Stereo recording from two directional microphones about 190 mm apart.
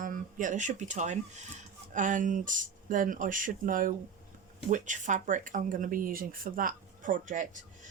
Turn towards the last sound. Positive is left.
turn(degrees=-40)  # may be behind; listen again after turning